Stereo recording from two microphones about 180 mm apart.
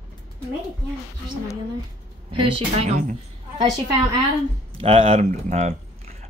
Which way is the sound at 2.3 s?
35° right (ahead or behind).